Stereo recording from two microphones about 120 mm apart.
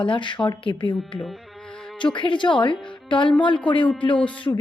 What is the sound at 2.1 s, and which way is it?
Speech, 40° left (ahead or behind).